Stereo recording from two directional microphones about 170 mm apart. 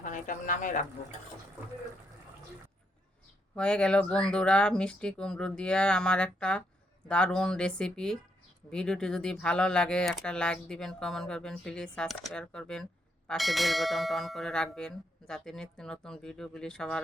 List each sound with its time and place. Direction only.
0.0 s speech: 50° left (ahead or behind)
3.5 s speech: 5° left (ahead or behind)